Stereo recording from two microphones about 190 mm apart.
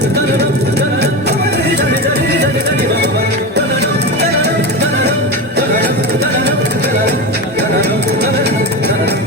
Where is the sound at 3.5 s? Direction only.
60° right (ahead or behind).